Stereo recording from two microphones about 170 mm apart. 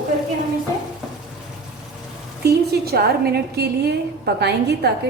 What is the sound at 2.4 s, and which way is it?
A woman's voice, 70° right (ahead or behind).